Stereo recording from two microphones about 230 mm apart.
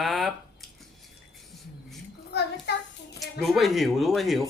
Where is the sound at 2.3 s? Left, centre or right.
Left.